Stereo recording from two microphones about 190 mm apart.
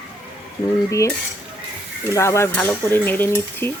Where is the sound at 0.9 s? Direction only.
15° left (ahead or behind).